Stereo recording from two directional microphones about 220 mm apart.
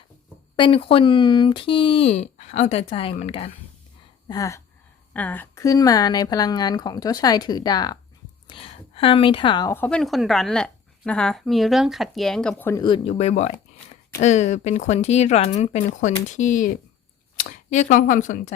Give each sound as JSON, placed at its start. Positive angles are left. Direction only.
{"t": 0.5, "sound": "speech", "side_deg": 20}
{"t": 4.3, "sound": "a woman's voice", "side_deg": 15}
{"t": 12.8, "sound": "speech", "side_deg": 25}